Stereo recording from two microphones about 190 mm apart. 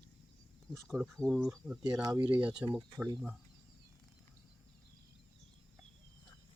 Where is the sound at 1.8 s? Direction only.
20° right (ahead or behind).